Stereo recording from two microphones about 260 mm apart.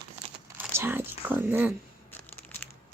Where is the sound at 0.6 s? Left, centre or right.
Centre.